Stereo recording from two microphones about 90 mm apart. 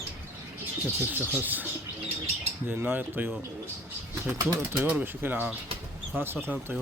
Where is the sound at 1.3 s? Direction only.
20° right (ahead or behind).